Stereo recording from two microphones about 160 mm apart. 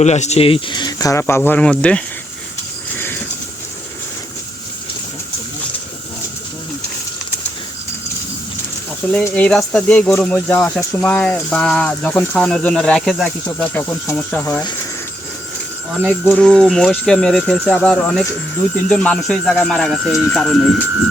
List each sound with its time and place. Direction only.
0.0 s speech: 45° left (ahead or behind); by 1.4 s 20° left (ahead or behind)
1.5 s speech: 5° left (ahead or behind)
9.2 s speech: 5° left (ahead or behind)
14.6 s speech: 25° left (ahead or behind)
16.0 s speech: centre (ahead or behind)